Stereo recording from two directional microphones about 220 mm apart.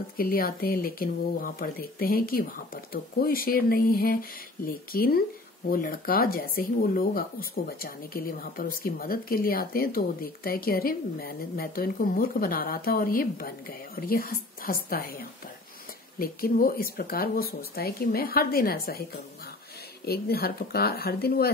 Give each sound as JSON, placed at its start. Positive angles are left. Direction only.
{"t": 0.2, "sound": "speech", "side_deg": 40}
{"t": 20.1, "sound": "speech", "side_deg": 45}